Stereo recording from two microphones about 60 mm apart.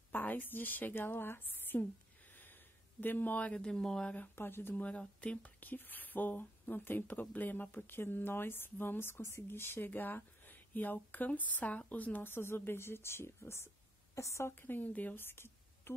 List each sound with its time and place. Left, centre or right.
0.1 s a woman's voice: left
2.3 s a sound: left
3.6 s speech: centre
4.4 s speech: left
4.8 s a woman's voice: left
14.5 s speech: left
15.2 s a sound: left